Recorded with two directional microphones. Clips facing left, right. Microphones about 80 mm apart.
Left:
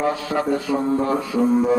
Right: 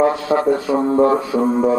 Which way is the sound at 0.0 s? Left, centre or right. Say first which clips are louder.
Right 7 dB; right.